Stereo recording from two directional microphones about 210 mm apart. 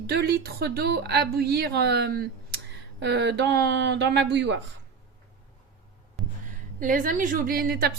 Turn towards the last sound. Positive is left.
turn(degrees=-45)  # may be behind; listen again after turning